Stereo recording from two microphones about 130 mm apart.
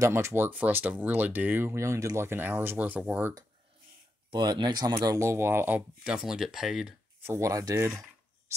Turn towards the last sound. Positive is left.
turn(degrees=-25)  # may be behind; listen again after turning